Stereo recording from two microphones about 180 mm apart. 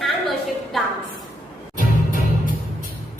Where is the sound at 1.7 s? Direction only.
45° right (ahead or behind).